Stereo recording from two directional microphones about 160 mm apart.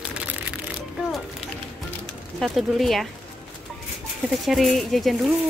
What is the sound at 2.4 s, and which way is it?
Speech, centre (ahead or behind).